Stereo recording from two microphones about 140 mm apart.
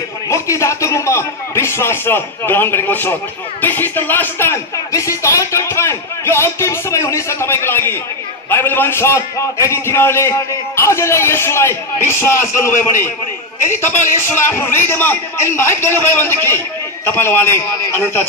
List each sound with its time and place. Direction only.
0.3 s a man's voice: 20° left (ahead or behind)